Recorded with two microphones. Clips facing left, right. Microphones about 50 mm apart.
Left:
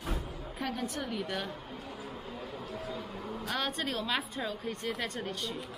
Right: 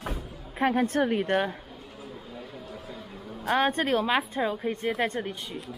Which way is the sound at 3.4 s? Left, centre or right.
Right.